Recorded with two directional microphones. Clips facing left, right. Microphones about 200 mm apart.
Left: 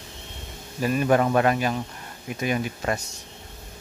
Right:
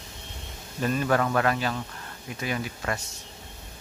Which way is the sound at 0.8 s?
15° left (ahead or behind).